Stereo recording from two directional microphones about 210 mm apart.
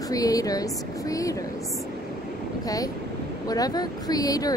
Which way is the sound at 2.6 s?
15° left (ahead or behind).